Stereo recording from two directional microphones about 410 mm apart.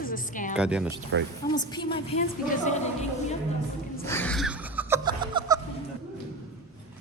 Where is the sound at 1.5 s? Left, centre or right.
Centre.